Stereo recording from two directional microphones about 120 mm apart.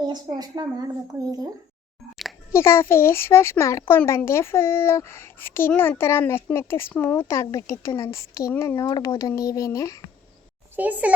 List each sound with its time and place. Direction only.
0.1 s speech: 35° right (ahead or behind)
2.5 s speech: 20° left (ahead or behind)
10.8 s a child's voice: 15° right (ahead or behind)